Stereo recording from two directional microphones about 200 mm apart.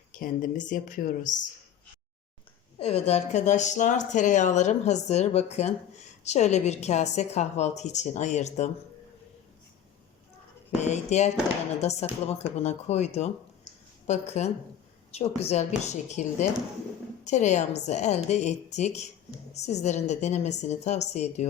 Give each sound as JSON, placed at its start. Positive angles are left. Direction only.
{"t": 0.1, "sound": "speech", "side_deg": 40}
{"t": 2.7, "sound": "speech", "side_deg": 30}
{"t": 10.8, "sound": "speech", "side_deg": 35}